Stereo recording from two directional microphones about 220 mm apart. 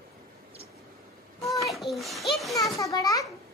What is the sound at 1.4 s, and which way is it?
A child's voice, centre (ahead or behind).